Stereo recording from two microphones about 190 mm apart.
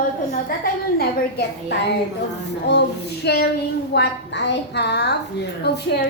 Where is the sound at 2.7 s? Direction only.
65° left (ahead or behind).